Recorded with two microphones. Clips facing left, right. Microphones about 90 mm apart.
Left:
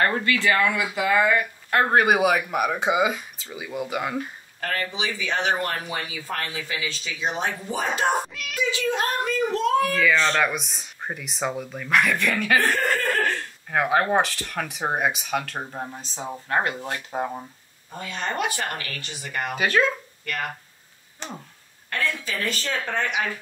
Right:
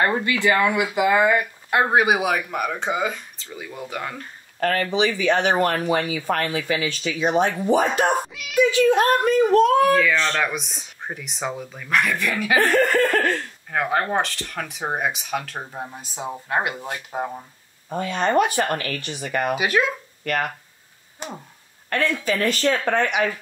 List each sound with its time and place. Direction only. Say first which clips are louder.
0.0 s speech: right 2 dB; 20° right (ahead or behind); by 4.3 s 10° left (ahead or behind)
4.6 s speech: right 7 dB; 50° right (ahead or behind)
9.9 s speech: right 1 dB; centre (ahead or behind)
12.5 s speech: right 7 dB; 60° right (ahead or behind)
13.7 s speech: left 1 dB; 5° left (ahead or behind)
17.1 s speech: even; centre (ahead or behind)
17.9 s speech: right 9 dB; 55° right (ahead or behind)
19.5 s speech: left 2 dB; 10° right (ahead or behind)
21.8 s speech: right 6 dB; 55° right (ahead or behind)